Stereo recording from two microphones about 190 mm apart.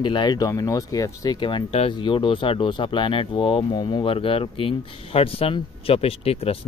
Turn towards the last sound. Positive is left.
turn(degrees=30)  # may be behind; listen again after turning